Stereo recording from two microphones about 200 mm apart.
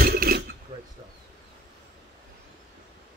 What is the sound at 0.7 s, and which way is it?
Speech, 20° right (ahead or behind).